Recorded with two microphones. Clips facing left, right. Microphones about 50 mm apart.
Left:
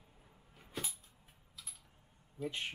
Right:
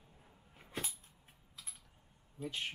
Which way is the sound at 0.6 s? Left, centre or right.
Centre.